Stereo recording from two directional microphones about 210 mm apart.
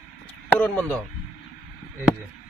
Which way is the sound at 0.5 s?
10° left (ahead or behind).